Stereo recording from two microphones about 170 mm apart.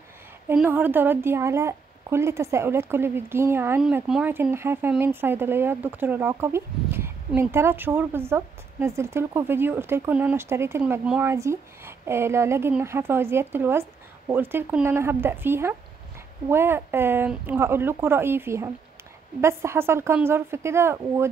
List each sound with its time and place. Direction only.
0.5 s speech: 10° right (ahead or behind)